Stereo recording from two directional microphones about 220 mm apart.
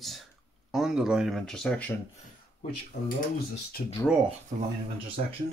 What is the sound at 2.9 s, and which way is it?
Speech, 50° left (ahead or behind).